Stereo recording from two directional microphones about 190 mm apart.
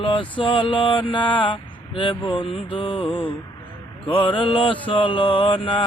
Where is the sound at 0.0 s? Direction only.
25° left (ahead or behind).